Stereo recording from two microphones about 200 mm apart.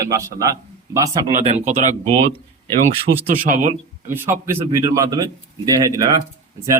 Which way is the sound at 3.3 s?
40° right (ahead or behind).